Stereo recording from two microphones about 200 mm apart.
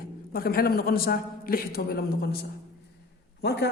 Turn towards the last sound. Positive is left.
turn(degrees=55)  # may be behind; listen again after turning